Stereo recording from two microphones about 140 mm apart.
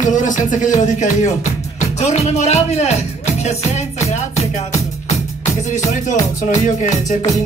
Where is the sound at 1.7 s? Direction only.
55° left (ahead or behind).